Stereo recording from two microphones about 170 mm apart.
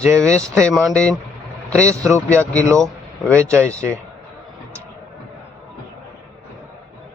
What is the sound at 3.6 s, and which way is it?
Speech, 10° left (ahead or behind).